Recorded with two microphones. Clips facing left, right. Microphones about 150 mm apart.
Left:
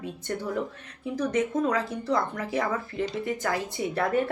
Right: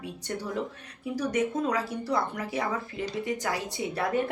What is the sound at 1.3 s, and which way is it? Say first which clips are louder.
A woman's voice: left 2 dB; 30° right (ahead or behind).